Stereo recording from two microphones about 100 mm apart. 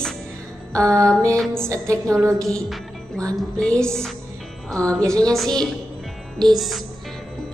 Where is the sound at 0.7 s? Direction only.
30° right (ahead or behind).